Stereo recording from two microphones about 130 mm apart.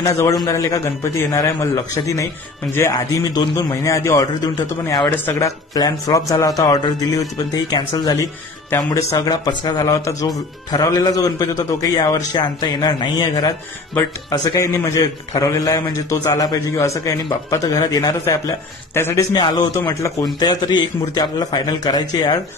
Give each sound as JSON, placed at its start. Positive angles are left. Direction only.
{"t": 0.0, "sound": "a man's voice", "side_deg": 25}
{"t": 5.1, "sound": "speech", "side_deg": 15}
{"t": 5.8, "sound": "a man's voice", "side_deg": 25}
{"t": 19.3, "sound": "a man's voice", "side_deg": 35}